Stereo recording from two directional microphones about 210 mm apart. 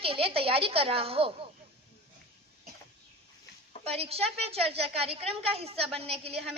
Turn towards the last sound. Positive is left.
turn(degrees=-30)  # may be behind; listen again after turning